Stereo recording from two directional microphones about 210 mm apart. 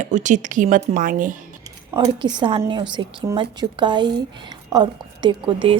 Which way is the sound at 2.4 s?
25° right (ahead or behind).